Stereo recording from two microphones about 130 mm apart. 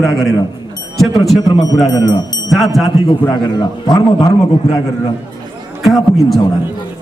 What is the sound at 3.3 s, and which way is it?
A man's voice, 30° left (ahead or behind).